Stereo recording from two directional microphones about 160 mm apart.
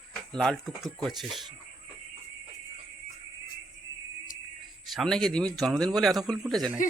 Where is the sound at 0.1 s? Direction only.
Centre (ahead or behind).